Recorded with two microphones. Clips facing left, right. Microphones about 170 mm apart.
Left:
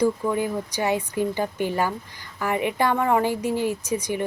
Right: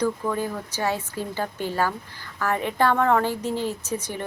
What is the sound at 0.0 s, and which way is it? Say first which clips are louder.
A woman's voice: left 3 dB; 15° left (ahead or behind).